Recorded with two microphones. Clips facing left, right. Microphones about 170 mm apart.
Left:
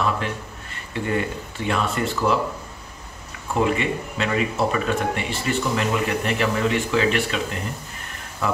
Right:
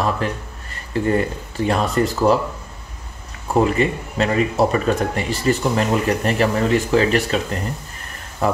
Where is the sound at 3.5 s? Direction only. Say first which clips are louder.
Right 4 dB; 40° right (ahead or behind).